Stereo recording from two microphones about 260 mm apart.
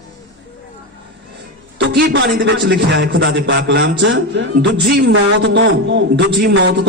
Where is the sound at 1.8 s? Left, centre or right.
Right.